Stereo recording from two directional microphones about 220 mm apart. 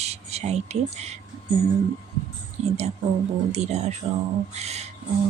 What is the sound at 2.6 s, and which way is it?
Speech, 30° right (ahead or behind).